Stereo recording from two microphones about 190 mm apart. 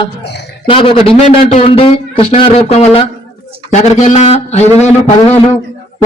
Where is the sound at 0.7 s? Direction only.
30° left (ahead or behind).